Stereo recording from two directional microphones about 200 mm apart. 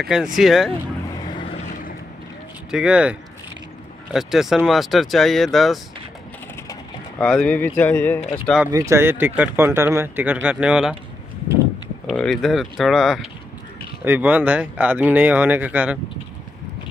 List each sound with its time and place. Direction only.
0.0 s speech: centre (ahead or behind)
1.4 s vehicle: 35° left (ahead or behind)
2.7 s speech: 5° right (ahead or behind)
7.2 s speech: 5° left (ahead or behind)
8.7 s speech: 15° right (ahead or behind)
12.1 s speech: centre (ahead or behind)